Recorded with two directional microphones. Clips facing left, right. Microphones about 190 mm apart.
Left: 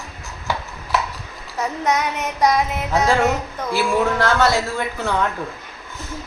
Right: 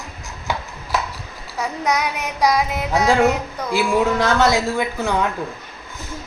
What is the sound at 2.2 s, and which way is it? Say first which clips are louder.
A woman's voice: even; 10° right (ahead or behind).